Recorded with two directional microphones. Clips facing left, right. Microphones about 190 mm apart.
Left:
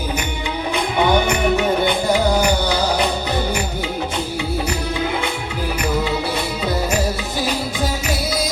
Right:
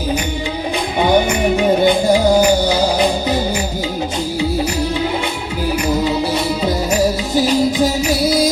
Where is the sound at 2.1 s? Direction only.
30° right (ahead or behind).